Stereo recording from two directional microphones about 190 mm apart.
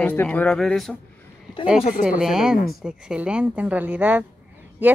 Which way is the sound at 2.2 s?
Centre (ahead or behind).